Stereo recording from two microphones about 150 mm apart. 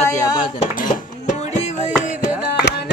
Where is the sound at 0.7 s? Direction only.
60° left (ahead or behind).